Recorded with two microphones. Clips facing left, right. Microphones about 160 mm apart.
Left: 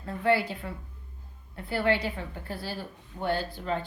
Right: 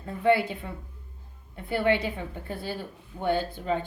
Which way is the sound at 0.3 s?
20° right (ahead or behind).